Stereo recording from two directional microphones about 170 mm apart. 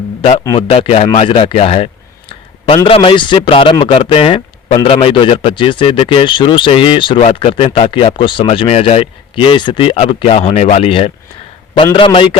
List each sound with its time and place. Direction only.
0.2 s a man's voice: 35° left (ahead or behind)